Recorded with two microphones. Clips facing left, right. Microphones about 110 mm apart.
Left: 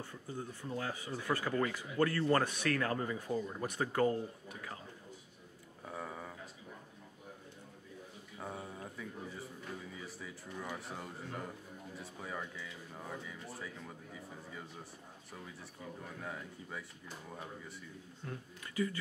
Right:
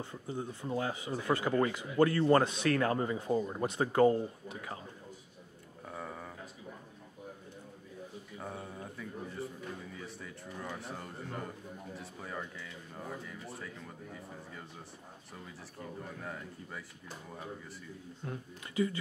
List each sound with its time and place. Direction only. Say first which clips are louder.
0.0 s a man's voice: right 4 dB; 20° right (ahead or behind)
5.9 s a sound: right 1 dB; centre (ahead or behind)
8.4 s a sound: right 1 dB; centre (ahead or behind)
9.9 s a man's voice: right 2 dB; centre (ahead or behind)
16.2 s a man's voice: right 1 dB; centre (ahead or behind)
18.2 s a man's voice: right 3 dB; 25° right (ahead or behind)